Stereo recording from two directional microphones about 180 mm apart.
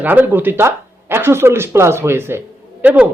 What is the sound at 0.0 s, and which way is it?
Speech, 10° right (ahead or behind).